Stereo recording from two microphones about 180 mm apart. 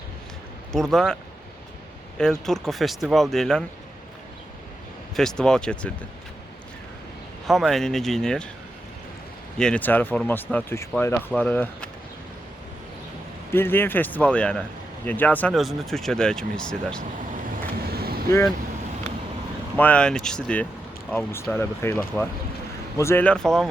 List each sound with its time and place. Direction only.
0.7 s speech: centre (ahead or behind)
2.1 s speech: 5° left (ahead or behind)
5.1 s speech: 5° left (ahead or behind)
7.4 s speech: centre (ahead or behind)
9.6 s speech: 5° left (ahead or behind)
13.5 s speech: 10° left (ahead or behind)
17.9 s vehicle: 60° right (ahead or behind)
19.7 s speech: 10° left (ahead or behind)